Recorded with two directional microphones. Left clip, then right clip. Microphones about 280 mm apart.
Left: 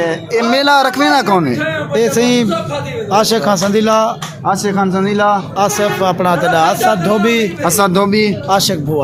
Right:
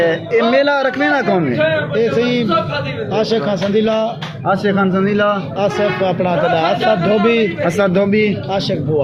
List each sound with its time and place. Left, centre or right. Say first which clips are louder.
0.0 s a man's voice: right 1 dB; left
1.9 s a man's voice: left 3 dB; left
4.6 s a man's voice: left 1 dB; left
5.5 s a man's voice: left 2 dB; left
7.9 s a man's voice: left 2 dB; left
8.4 s a man's voice: left 5 dB; left